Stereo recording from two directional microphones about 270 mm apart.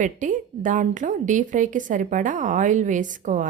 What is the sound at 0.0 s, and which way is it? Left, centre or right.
A woman's voice, right.